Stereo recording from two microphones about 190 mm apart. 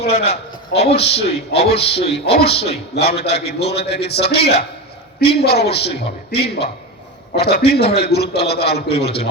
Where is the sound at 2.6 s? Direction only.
30° left (ahead or behind).